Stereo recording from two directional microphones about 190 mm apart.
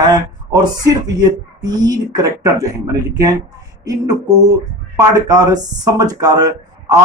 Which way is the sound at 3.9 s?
20° right (ahead or behind).